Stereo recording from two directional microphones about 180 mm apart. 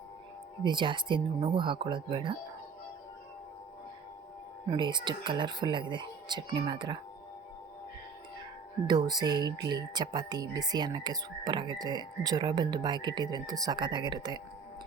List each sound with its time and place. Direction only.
0.6 s speech: 25° right (ahead or behind)
4.7 s speech: 25° right (ahead or behind)
8.9 s speech: 25° right (ahead or behind)